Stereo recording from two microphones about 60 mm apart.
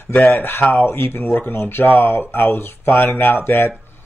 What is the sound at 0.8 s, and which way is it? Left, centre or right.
Speech, left.